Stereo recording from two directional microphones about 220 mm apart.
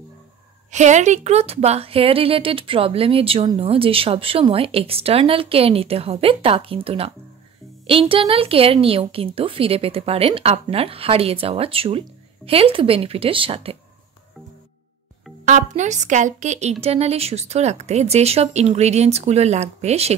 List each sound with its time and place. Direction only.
0.7 s a woman's voice: 30° right (ahead or behind)
15.4 s a woman's voice: 35° right (ahead or behind)